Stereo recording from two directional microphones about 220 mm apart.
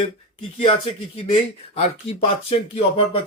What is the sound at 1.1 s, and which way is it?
Speech, 25° left (ahead or behind).